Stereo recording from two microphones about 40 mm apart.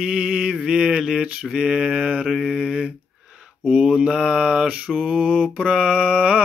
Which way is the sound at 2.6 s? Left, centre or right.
Right.